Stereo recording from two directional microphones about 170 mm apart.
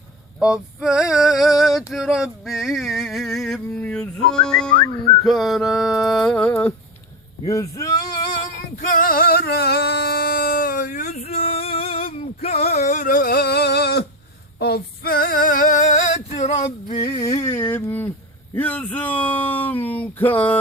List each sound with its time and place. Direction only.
0.3 s male singing: 5° right (ahead or behind)
6.5 s speech: 10° left (ahead or behind)
8.8 s singing: 50° left (ahead or behind); by 12.0 s 35° left (ahead or behind)
12.1 s a sound: 40° left (ahead or behind); by 14.1 s 70° left (ahead or behind)
14.6 s female singing: 65° left (ahead or behind); by 17.0 s 40° left (ahead or behind)
17.0 s speech: 25° left (ahead or behind); by 20.6 s 10° left (ahead or behind)